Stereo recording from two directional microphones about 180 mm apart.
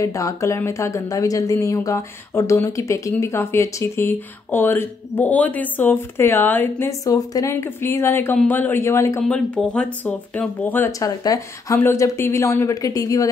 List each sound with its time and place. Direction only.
0.0 s speech: 20° left (ahead or behind)
9.2 s speech: 5° left (ahead or behind)